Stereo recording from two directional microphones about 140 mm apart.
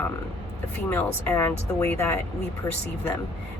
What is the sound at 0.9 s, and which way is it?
Speech, 15° left (ahead or behind).